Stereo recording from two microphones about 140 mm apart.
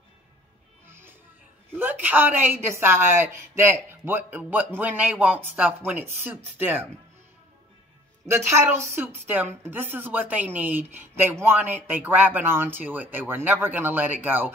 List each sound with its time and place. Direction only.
1.8 s a woman's voice: 15° right (ahead or behind)
8.3 s a woman's voice: 20° right (ahead or behind)